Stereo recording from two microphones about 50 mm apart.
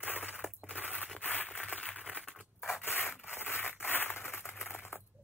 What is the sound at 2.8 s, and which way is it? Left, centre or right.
Rub, left.